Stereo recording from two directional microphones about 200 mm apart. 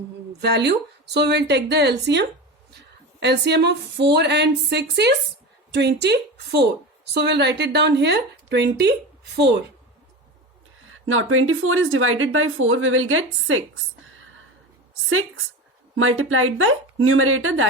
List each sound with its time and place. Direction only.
0.4 s a woman's voice: 55° right (ahead or behind)
10.8 s a woman's voice: 90° right
16.0 s a woman's voice: 90° right